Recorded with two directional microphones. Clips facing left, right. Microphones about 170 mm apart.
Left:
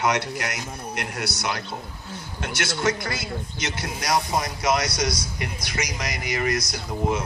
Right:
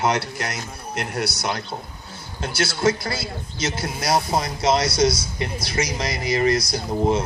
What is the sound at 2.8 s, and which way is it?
Speech, 30° right (ahead or behind).